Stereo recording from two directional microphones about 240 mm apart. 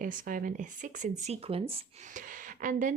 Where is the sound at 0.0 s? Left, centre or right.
Right.